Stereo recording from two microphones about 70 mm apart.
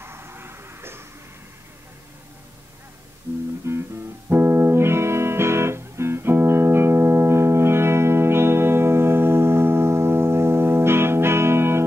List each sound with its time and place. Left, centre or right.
0.0 s vehicle: right
3.3 s music: right